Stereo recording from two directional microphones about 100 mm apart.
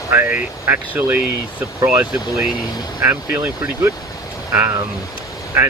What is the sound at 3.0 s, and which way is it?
Speech, 20° right (ahead or behind).